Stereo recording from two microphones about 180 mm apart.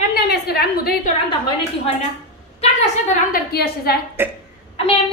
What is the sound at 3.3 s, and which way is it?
Speech, 60° left (ahead or behind).